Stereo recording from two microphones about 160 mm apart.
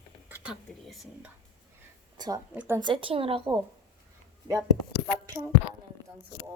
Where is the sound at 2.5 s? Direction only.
15° right (ahead or behind).